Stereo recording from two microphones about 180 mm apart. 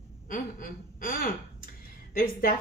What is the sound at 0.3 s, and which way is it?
A woman's voice, 50° left (ahead or behind).